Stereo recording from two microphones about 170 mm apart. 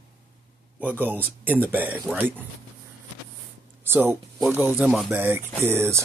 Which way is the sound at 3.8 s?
15° right (ahead or behind).